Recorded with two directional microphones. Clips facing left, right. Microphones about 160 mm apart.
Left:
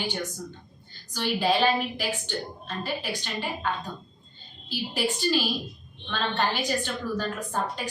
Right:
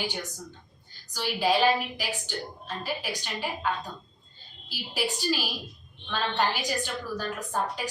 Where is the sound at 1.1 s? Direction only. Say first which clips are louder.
Left 1 dB; 5° right (ahead or behind).